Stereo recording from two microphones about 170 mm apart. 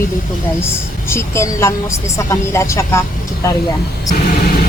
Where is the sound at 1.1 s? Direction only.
15° left (ahead or behind).